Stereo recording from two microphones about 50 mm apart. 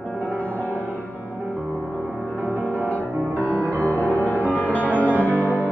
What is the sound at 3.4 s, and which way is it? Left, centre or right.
Music, right.